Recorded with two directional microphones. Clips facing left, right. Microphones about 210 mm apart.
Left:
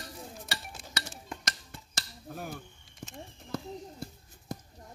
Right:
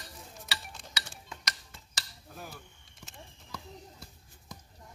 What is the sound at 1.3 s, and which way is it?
Dishes, 50° left (ahead or behind).